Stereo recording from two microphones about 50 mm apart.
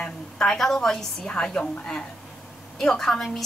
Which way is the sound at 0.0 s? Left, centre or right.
Centre.